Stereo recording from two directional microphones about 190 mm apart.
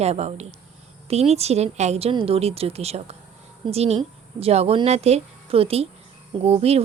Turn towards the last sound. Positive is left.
turn(degrees=-30)  # may be behind; listen again after turning